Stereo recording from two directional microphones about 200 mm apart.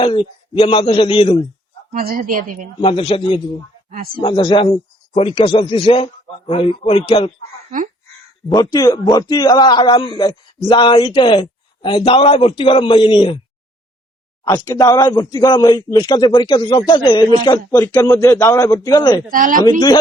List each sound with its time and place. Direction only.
0.0 s a man's voice: 25° left (ahead or behind)
1.9 s a woman's voice: 45° right (ahead or behind)
2.8 s a man's voice: 25° left (ahead or behind)
3.8 s a woman's voice: 45° right (ahead or behind)
4.2 s a man's voice: 25° left (ahead or behind)
8.4 s a man's voice: 20° left (ahead or behind)
14.4 s a man's voice: 15° left (ahead or behind)
19.3 s a woman's voice: 45° right (ahead or behind)